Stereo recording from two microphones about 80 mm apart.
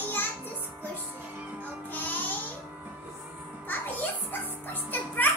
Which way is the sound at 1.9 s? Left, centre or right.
Left.